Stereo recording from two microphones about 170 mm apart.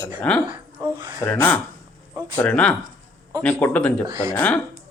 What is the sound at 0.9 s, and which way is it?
Speech, 25° right (ahead or behind).